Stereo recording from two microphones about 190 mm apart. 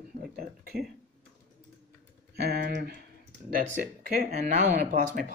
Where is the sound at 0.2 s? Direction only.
50° right (ahead or behind).